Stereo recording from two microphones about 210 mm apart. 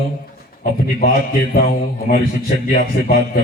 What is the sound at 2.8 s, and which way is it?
Speech, 45° left (ahead or behind).